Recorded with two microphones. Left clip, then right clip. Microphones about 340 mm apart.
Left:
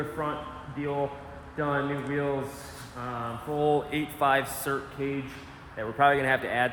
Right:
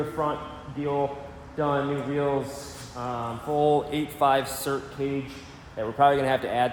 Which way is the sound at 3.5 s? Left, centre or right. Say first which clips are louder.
Right 3 dB; centre.